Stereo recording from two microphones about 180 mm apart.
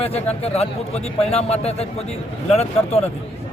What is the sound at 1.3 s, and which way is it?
Speech, 35° left (ahead or behind).